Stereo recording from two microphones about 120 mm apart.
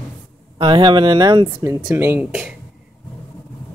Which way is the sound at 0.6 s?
40° right (ahead or behind).